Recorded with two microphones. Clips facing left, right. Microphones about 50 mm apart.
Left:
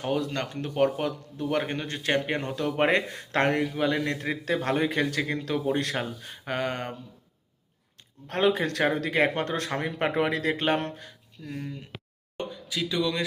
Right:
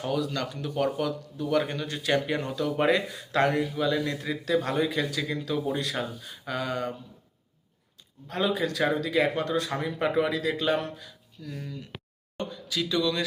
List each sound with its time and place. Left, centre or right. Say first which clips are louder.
0.0 s a man's voice: left 1 dB; left
8.3 s a man's voice: left 3 dB; left
11.4 s speech: left 2 dB; left
12.4 s speech: even; centre